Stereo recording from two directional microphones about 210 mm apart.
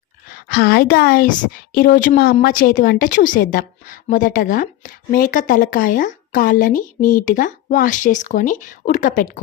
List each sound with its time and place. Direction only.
0.3 s a woman's voice: 50° left (ahead or behind)